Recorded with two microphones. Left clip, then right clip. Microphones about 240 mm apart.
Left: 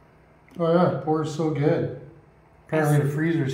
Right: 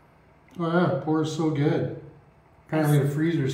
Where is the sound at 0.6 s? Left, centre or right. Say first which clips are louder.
Left 4 dB; centre.